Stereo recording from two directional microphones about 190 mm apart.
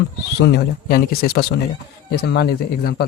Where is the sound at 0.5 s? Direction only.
50° left (ahead or behind).